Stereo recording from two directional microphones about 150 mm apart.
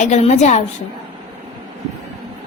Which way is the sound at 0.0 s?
50° left (ahead or behind).